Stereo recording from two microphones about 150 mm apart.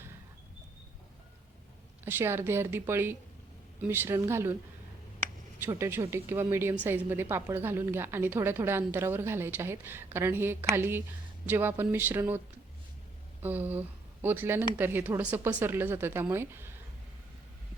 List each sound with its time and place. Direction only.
2.0 s a woman's voice: 15° right (ahead or behind)
5.6 s a woman's voice: 15° right (ahead or behind)
13.4 s a woman's voice: 10° right (ahead or behind)